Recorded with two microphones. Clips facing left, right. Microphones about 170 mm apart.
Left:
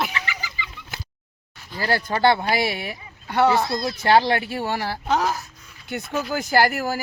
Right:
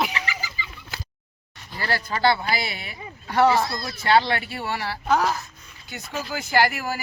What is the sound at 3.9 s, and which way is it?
Speech, 45° left (ahead or behind).